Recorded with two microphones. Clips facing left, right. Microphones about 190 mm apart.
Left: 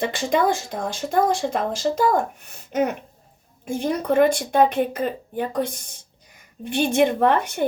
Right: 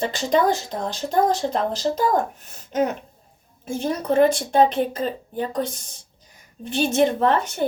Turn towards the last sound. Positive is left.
turn(degrees=15)  # may be behind; listen again after turning